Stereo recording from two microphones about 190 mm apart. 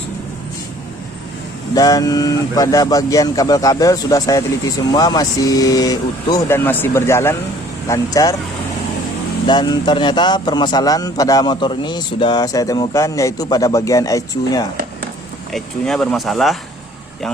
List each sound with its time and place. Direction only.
1.7 s a man's voice: 20° left (ahead or behind)
9.5 s a man's voice: 25° left (ahead or behind)
15.5 s speech: 5° left (ahead or behind)